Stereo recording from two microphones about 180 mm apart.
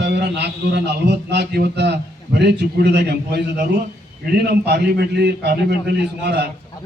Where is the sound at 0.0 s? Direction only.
70° right (ahead or behind).